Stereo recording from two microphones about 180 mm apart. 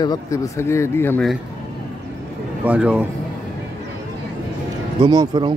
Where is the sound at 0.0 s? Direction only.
20° left (ahead or behind).